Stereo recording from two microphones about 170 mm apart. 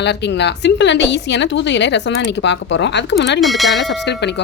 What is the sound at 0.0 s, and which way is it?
A woman's voice, 90° left.